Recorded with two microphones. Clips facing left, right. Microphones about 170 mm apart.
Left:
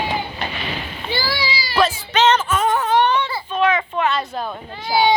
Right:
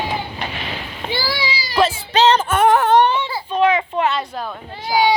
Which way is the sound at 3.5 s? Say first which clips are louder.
Right 2 dB; 30° right (ahead or behind).